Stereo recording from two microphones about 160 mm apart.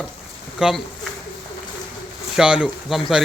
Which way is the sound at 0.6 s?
5° right (ahead or behind).